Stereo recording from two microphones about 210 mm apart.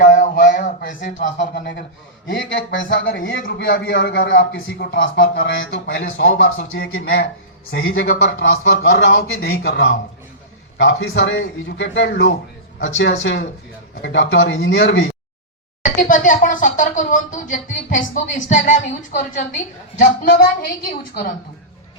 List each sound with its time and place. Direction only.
0.0 s a sound: 40° left (ahead or behind)
1.4 s a man's voice: 55° left (ahead or behind)
3.4 s a man's voice: 50° left (ahead or behind)
5.5 s a man's voice: 55° left (ahead or behind)
6.7 s a man's voice: 45° left (ahead or behind)
7.9 s a man's voice: 65° left (ahead or behind)
15.8 s a man's voice: 40° left (ahead or behind)